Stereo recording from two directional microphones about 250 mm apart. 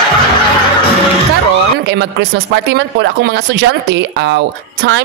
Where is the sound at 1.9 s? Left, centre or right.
Right.